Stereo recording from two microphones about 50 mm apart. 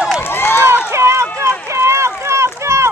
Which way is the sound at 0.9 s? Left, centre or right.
Right.